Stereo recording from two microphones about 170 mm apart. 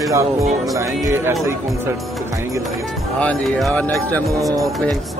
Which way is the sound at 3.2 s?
5° left (ahead or behind).